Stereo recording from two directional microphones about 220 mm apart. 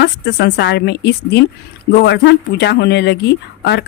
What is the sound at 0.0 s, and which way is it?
Speech, 50° left (ahead or behind).